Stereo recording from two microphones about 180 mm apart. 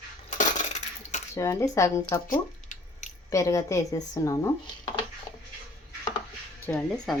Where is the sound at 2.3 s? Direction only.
45° left (ahead or behind).